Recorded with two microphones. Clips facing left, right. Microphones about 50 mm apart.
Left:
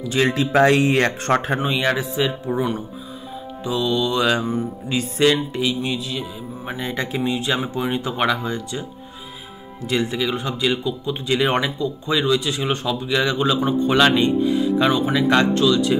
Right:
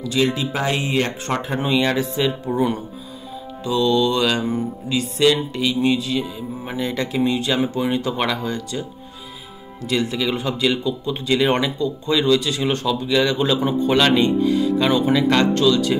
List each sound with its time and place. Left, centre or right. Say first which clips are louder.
0.0 s speech: even; left
0.3 s speech: left 6 dB; left
1.6 s speech: right 1 dB; centre
3.6 s speech: right 3 dB; centre
4.8 s music: right 1 dB; left
5.3 s speech: even; centre
6.8 s music: right 2 dB; left
7.2 s speech: right 3 dB; centre
9.8 s music: even; left
10.2 s speech: right 1 dB; centre